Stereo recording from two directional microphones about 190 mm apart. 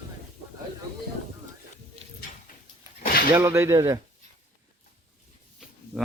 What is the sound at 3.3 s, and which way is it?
Speech, 15° right (ahead or behind).